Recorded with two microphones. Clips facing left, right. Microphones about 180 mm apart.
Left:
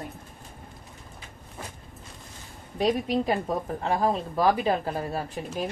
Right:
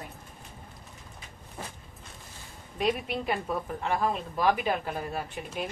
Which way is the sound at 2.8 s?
35° left (ahead or behind).